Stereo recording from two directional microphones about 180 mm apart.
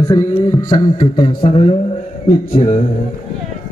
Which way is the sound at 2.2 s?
35° left (ahead or behind).